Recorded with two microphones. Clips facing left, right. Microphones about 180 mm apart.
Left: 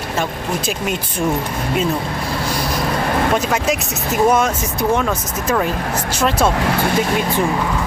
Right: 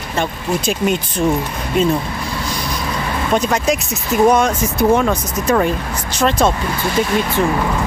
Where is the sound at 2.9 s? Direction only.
50° left (ahead or behind).